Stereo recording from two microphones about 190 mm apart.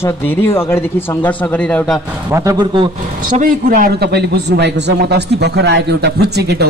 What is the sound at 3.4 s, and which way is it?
A man's voice, 50° right (ahead or behind).